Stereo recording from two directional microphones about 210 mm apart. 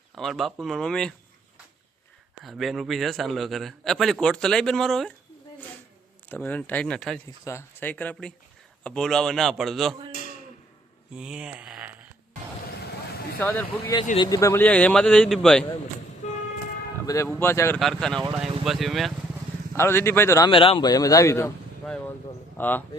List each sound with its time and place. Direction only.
0.2 s a man's voice: centre (ahead or behind)
2.4 s a man's voice: centre (ahead or behind)
6.2 s a man's voice: 5° left (ahead or behind)
11.1 s a sound: 5° right (ahead or behind)
13.4 s a man's voice: 10° left (ahead or behind)
16.2 s vehicle: 35° left (ahead or behind)
17.2 s a man's voice: 10° left (ahead or behind)
17.7 s a man's voice: centre (ahead or behind)
19.7 s a man's voice: 10° left (ahead or behind)